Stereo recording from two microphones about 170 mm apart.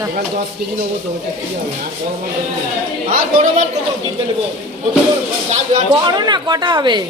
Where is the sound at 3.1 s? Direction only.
50° right (ahead or behind).